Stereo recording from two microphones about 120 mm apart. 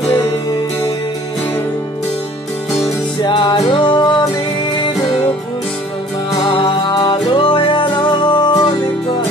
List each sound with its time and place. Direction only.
3.2 s music: 35° left (ahead or behind)
6.6 s music: 30° left (ahead or behind)
7.3 s music: 45° left (ahead or behind)